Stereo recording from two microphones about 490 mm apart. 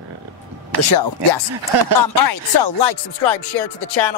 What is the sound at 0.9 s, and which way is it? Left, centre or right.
Music, left.